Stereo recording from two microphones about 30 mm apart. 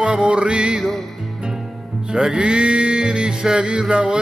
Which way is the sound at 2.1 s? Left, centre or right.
Right.